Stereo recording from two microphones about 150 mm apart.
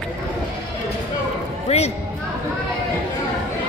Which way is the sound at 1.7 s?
45° left (ahead or behind).